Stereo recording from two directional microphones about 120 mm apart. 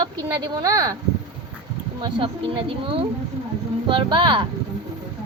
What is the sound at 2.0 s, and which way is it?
Speech, 45° right (ahead or behind).